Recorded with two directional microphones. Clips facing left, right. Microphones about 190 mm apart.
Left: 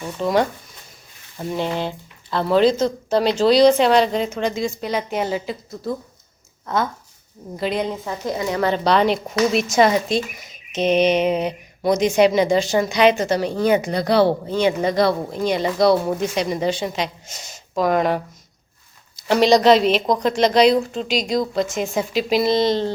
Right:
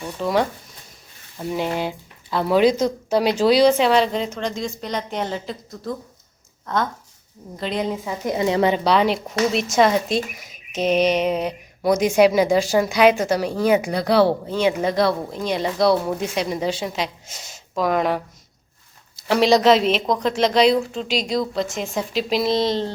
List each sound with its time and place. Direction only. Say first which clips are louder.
0.2 s speech: left 2 dB; centre (ahead or behind)
7.5 s speech: left 1 dB; 5° left (ahead or behind)
8.2 s speech: right 3 dB; 20° right (ahead or behind)
8.7 s speech: left 1 dB; 5° right (ahead or behind)